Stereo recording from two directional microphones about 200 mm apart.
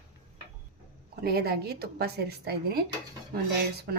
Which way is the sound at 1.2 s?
50° right (ahead or behind).